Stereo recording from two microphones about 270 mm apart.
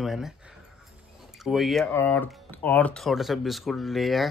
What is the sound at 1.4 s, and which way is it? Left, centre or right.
Speech, centre.